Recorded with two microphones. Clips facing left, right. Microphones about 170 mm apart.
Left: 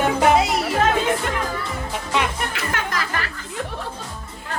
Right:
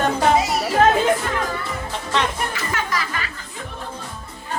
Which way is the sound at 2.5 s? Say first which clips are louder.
Even; 60° left (ahead or behind).